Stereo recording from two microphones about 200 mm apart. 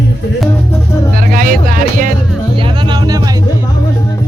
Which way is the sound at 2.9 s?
20° right (ahead or behind).